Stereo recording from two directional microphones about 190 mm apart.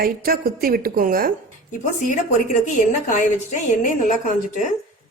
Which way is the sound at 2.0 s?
40° left (ahead or behind).